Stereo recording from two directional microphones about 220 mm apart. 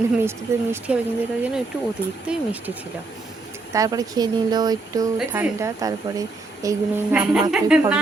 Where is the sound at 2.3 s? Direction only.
5° right (ahead or behind).